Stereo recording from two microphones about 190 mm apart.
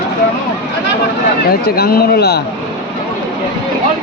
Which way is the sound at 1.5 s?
55° left (ahead or behind).